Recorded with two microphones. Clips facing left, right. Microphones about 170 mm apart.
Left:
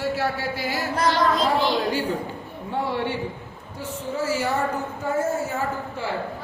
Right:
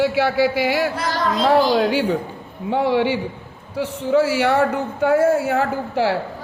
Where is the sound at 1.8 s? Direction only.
85° right.